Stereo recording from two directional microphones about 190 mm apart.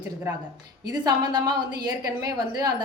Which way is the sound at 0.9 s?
20° right (ahead or behind).